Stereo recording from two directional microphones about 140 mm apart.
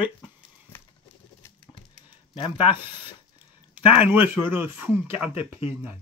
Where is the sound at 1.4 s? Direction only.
20° left (ahead or behind).